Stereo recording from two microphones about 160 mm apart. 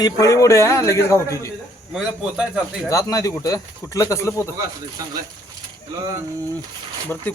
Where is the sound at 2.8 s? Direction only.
20° left (ahead or behind).